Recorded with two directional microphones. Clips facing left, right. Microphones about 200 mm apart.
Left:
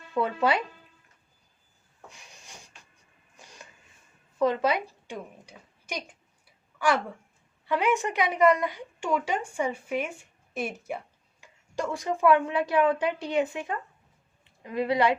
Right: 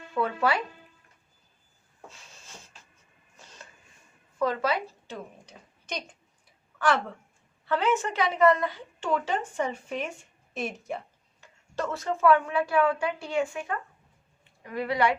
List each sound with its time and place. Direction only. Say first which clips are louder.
0.1 s a woman's voice: left 1 dB; 20° left (ahead or behind)
2.0 s a sound: even; 15° left (ahead or behind)
4.4 s a woman's voice: left 2 dB; 20° left (ahead or behind)